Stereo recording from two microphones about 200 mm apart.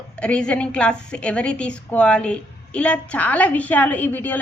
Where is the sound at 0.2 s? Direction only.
5° left (ahead or behind).